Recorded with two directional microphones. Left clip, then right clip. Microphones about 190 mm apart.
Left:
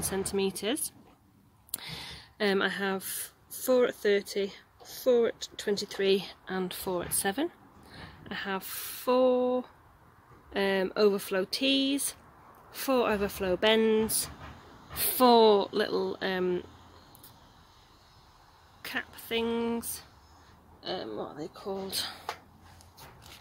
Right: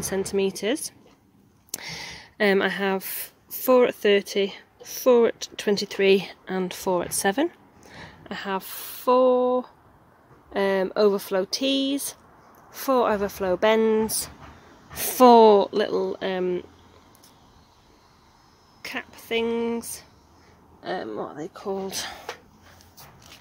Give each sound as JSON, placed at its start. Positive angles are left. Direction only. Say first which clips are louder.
{"t": 0.0, "sound": "speech", "louder": "right 6 dB", "side_deg": -20}
{"t": 1.8, "sound": "speech", "louder": "right 5 dB", "side_deg": -30}
{"t": 15.0, "sound": "speech", "louder": "right 8 dB", "side_deg": -30}
{"t": 18.8, "sound": "speech", "louder": "right 2 dB", "side_deg": -15}
{"t": 20.8, "sound": "speech", "louder": "right 6 dB", "side_deg": -35}